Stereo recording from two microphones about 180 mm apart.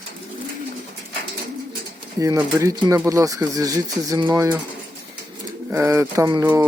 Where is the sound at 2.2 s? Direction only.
15° right (ahead or behind).